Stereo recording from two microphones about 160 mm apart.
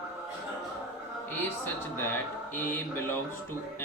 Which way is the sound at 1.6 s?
10° left (ahead or behind).